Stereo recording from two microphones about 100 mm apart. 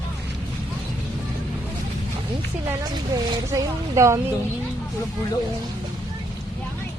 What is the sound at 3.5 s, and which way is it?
Speech, 30° right (ahead or behind).